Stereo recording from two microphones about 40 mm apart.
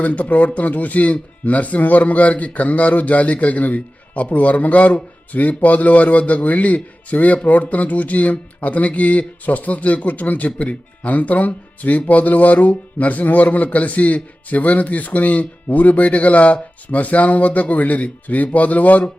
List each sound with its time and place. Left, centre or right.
0.0 s speech: left